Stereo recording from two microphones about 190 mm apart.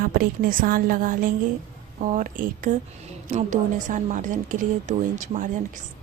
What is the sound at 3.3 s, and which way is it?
A woman's voice, 40° right (ahead or behind).